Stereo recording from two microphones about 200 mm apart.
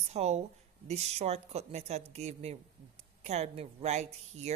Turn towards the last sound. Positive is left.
turn(degrees=-35)  # may be behind; listen again after turning